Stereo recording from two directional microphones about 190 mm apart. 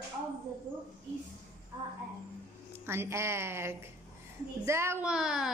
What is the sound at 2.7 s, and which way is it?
A woman's voice, 10° right (ahead or behind).